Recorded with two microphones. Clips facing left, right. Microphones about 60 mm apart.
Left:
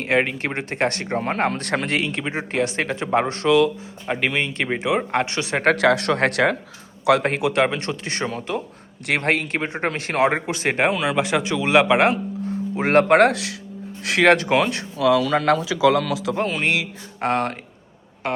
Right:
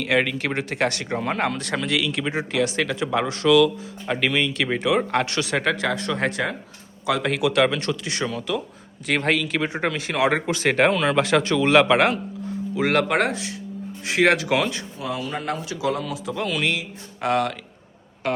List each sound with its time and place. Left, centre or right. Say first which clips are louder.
0.0 s speech: left 1 dB; left
4.7 s speech: even; centre
5.6 s speech: left 6 dB; left
7.4 s speech: even; left
9.1 s speech: left 1 dB; left
9.6 s speech: even; left
10.2 s speech: right 3 dB; centre
12.7 s speech: left 4 dB; left
13.1 s speech: left 7 dB; left
13.3 s speech: left 2 dB; left
14.0 s speech: left 1 dB; left
14.4 s speech: left 3 dB; left
14.7 s speech: left 11 dB; left
16.3 s speech: left 2 dB; left